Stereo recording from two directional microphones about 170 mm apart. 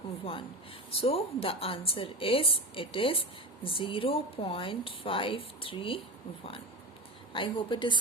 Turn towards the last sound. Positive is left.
turn(degrees=30)  # may be behind; listen again after turning